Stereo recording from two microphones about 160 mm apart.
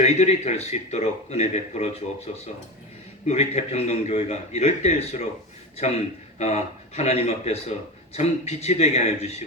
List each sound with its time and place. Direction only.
0.0 s a man's voice: 45° left (ahead or behind)